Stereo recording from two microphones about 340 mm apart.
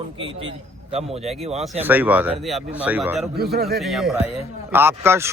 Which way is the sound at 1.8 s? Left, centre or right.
Centre.